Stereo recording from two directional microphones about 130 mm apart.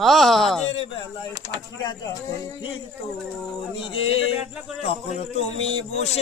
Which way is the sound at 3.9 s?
50° left (ahead or behind).